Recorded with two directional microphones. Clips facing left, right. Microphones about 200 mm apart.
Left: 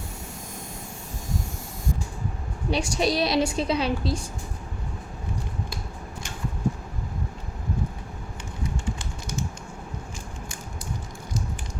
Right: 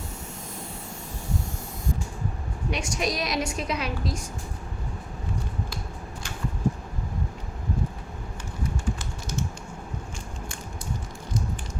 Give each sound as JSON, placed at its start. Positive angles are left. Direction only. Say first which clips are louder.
{"t": 2.6, "sound": "a woman's voice", "louder": "left 4 dB", "side_deg": 30}